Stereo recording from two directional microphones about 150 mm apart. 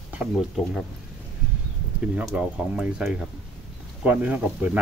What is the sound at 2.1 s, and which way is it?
Speech, 5° right (ahead or behind).